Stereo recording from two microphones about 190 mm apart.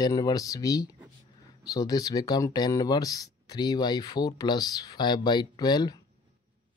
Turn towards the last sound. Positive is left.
turn(degrees=20)  # may be behind; listen again after turning